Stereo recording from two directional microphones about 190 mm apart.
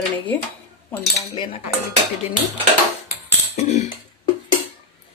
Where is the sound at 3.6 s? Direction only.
35° left (ahead or behind).